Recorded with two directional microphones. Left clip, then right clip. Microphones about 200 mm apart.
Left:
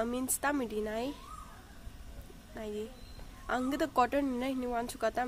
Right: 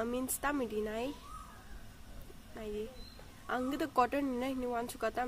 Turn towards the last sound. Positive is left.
turn(degrees=10)  # may be behind; listen again after turning